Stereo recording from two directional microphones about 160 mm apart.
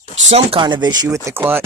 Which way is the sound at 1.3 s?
15° right (ahead or behind).